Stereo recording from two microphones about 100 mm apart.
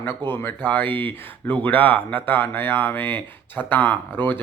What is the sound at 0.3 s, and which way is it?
Speech, 20° left (ahead or behind).